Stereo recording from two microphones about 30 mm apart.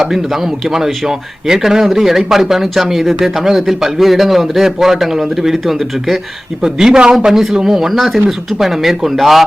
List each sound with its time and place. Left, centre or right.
0.0 s speech: centre
7.0 s a man's voice: right
7.3 s speech: centre